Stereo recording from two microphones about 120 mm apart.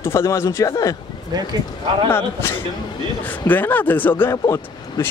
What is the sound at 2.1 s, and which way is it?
Speech, 20° left (ahead or behind).